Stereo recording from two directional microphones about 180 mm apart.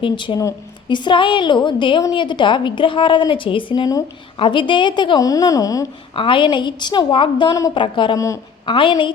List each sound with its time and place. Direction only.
0.0 s a woman's voice: 25° left (ahead or behind)